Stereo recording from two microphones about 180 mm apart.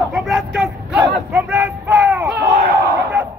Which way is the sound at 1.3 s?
10° right (ahead or behind).